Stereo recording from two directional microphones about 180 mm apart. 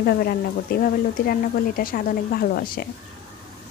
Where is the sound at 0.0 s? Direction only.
55° left (ahead or behind).